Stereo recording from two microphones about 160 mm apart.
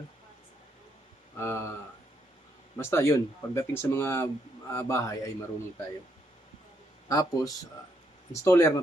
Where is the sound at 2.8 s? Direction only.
15° left (ahead or behind).